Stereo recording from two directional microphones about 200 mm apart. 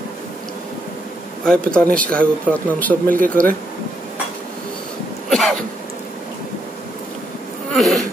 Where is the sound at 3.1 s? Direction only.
45° right (ahead or behind).